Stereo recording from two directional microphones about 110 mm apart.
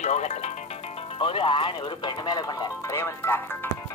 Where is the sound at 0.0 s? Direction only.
90° left.